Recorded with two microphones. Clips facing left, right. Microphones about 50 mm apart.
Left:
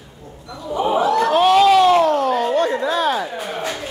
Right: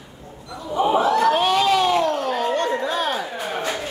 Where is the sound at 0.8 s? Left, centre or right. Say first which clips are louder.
Even; centre.